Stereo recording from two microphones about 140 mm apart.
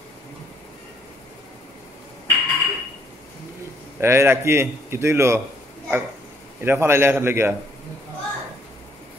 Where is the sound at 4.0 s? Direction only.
15° right (ahead or behind).